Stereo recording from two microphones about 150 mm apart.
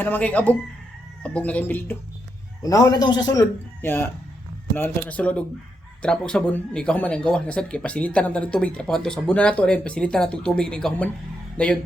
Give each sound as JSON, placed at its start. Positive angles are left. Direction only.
{"t": 0.0, "sound": "speech", "side_deg": 10}
{"t": 2.6, "sound": "speech", "side_deg": 25}